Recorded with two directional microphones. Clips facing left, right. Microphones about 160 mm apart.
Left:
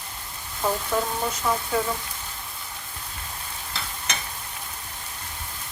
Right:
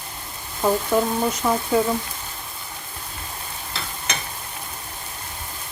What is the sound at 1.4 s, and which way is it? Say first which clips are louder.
Speech: right 3 dB; 25° right (ahead or behind).